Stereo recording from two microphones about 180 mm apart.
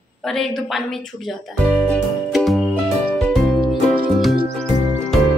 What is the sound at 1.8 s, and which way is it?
Music, centre (ahead or behind).